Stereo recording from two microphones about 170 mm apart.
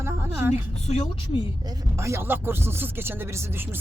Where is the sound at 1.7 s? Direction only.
15° right (ahead or behind).